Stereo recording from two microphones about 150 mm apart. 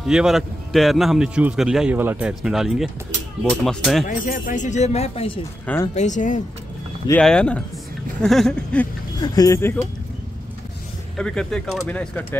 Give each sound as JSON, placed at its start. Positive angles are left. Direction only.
{"t": 0.0, "sound": "a man's voice", "side_deg": -5}
{"t": 4.1, "sound": "speech", "side_deg": 65}
{"t": 5.9, "sound": "speech", "side_deg": 55}
{"t": 7.2, "sound": "a man's voice", "side_deg": 5}
{"t": 9.2, "sound": "speech", "side_deg": 25}
{"t": 11.1, "sound": "a man's voice", "side_deg": 5}